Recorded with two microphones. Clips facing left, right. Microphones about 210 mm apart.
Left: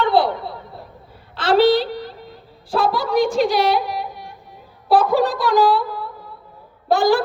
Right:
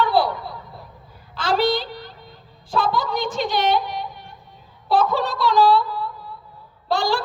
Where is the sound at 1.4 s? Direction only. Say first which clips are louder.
Left 6 dB; 5° left (ahead or behind).